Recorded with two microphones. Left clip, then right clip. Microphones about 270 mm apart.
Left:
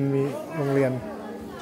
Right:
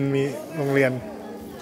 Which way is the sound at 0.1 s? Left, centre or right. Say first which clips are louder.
Right 1 dB; centre.